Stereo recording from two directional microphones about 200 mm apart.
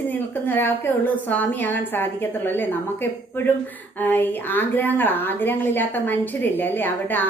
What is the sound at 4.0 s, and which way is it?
A woman's voice, 10° left (ahead or behind).